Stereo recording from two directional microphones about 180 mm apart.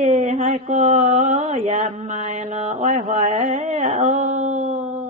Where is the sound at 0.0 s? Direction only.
40° right (ahead or behind).